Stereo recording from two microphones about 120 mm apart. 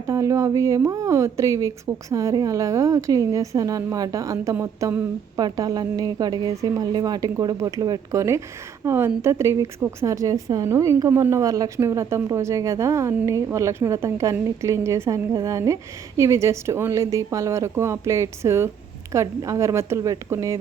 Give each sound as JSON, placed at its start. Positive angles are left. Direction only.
{"t": 0.1, "sound": "a woman's voice", "side_deg": -25}